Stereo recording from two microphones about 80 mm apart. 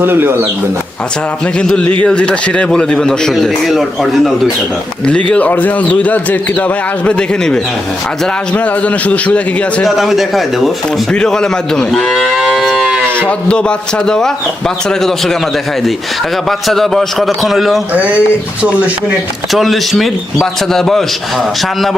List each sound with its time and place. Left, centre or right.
0.0 s speech: right
1.5 s speech: centre
5.0 s a man's voice: centre
9.8 s a man's voice: centre
13.2 s a man's voice: centre
16.5 s a man's voice: centre
17.9 s speech: centre
19.5 s a man's voice: centre